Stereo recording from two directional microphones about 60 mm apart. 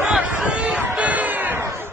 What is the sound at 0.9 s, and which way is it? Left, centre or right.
Music, right.